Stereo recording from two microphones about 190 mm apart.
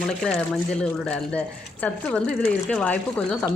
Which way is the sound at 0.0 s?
Centre (ahead or behind).